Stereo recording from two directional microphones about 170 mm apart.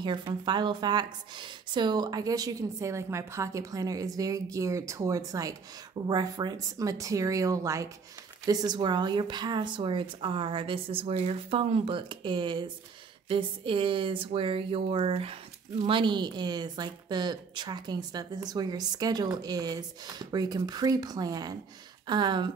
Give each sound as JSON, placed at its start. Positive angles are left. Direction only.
{"t": 0.0, "sound": "a woman's voice", "side_deg": -30}